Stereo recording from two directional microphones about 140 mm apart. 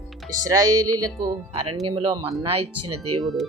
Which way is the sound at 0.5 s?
25° right (ahead or behind).